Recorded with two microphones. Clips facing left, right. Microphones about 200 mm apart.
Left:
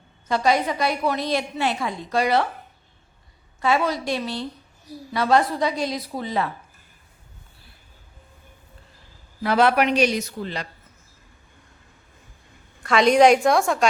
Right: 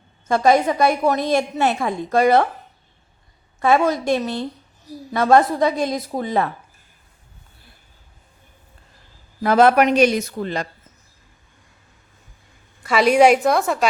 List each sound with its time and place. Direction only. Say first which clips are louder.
0.3 s a woman's voice: right 5 dB; 50° right (ahead or behind)
3.6 s a woman's voice: right 5 dB; 50° right (ahead or behind)
9.4 s a woman's voice: right 5 dB; 45° right (ahead or behind)
12.8 s a woman's voice: right 1 dB; 5° right (ahead or behind)